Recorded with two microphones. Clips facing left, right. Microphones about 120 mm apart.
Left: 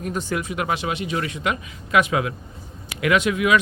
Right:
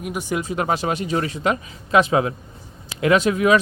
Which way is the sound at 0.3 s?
35° right (ahead or behind).